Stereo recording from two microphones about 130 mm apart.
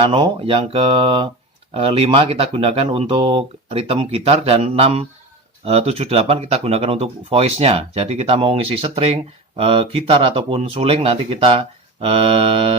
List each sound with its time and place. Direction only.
0.0 s speech: 45° right (ahead or behind)